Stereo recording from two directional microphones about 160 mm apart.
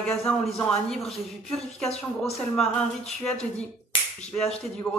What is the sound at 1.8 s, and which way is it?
Speech, 40° left (ahead or behind).